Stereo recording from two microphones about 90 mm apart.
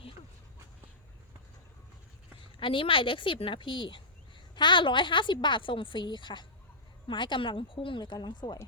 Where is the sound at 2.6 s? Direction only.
70° left (ahead or behind); by 8.6 s 55° left (ahead or behind).